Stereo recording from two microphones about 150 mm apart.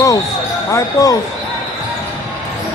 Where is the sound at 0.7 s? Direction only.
25° left (ahead or behind).